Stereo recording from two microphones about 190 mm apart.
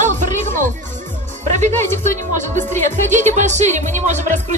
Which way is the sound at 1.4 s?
40° right (ahead or behind).